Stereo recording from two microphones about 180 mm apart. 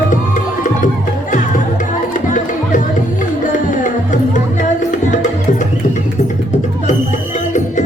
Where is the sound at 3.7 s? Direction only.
45° left (ahead or behind).